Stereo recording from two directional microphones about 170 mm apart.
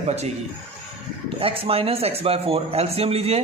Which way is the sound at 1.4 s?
35° right (ahead or behind).